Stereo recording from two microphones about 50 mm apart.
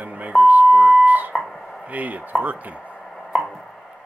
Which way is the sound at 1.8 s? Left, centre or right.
Right.